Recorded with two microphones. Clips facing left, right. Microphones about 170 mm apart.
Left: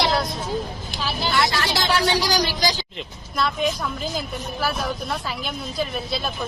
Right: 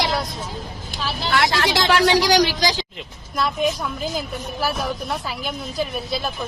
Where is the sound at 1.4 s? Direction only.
85° right.